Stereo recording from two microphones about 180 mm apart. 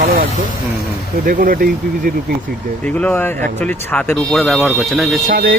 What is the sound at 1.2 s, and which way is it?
Speech, 50° right (ahead or behind).